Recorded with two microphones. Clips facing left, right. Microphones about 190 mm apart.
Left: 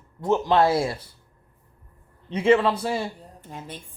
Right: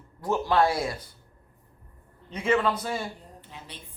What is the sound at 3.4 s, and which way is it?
Speech, 45° left (ahead or behind).